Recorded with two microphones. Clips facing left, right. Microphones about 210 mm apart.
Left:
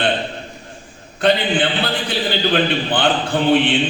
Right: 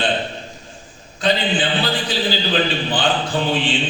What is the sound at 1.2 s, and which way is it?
A man's voice, 60° left (ahead or behind).